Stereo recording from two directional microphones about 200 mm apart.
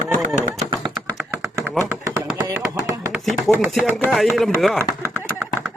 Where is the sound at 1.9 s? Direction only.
10° right (ahead or behind).